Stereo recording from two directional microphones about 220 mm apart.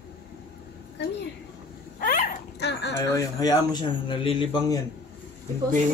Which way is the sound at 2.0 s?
45° left (ahead or behind).